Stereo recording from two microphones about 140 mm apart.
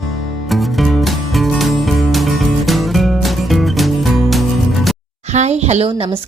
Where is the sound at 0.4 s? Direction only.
Centre (ahead or behind).